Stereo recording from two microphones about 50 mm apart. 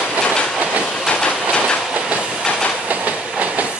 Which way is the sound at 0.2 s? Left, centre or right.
Centre.